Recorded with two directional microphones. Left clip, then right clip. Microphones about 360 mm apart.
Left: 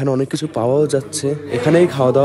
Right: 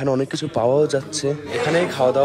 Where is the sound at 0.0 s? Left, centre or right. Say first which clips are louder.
Left 2 dB; centre.